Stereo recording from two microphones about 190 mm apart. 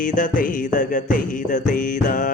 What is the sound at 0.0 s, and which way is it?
Music, 45° left (ahead or behind).